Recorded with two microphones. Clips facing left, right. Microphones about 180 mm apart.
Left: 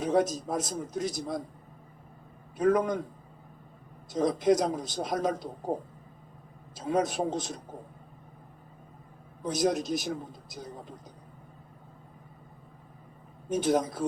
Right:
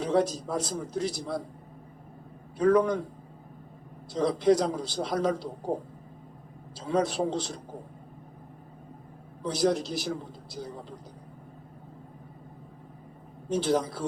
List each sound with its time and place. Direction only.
0.0 s a man's voice: 20° left (ahead or behind)
2.6 s a man's voice: 20° left (ahead or behind)
4.1 s a man's voice: 20° left (ahead or behind)
6.7 s a man's voice: 20° left (ahead or behind)
9.5 s a man's voice: 20° left (ahead or behind)
13.5 s a man's voice: 20° left (ahead or behind)